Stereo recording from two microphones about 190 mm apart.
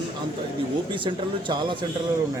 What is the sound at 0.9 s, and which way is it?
Speech, 25° right (ahead or behind).